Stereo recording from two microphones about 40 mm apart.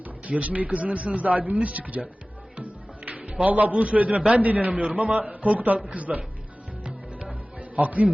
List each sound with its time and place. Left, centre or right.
0.3 s a man's voice: right
2.6 s music: right
3.2 s a man's voice: right
4.7 s a man's voice: right
6.8 s music: right
7.8 s a man's voice: right